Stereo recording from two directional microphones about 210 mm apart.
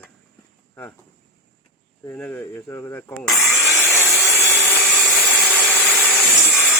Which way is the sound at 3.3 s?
Centre (ahead or behind).